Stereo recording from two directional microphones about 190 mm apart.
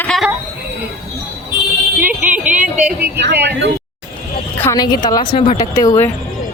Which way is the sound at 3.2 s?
60° right (ahead or behind).